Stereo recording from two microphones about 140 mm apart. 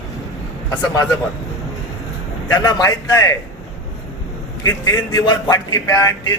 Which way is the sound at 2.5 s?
30° left (ahead or behind).